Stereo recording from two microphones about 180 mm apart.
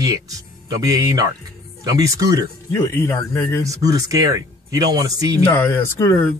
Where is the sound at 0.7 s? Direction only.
20° right (ahead or behind).